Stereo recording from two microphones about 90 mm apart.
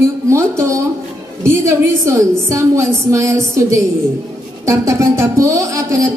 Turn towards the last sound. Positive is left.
turn(degrees=-35)  # may be behind; listen again after turning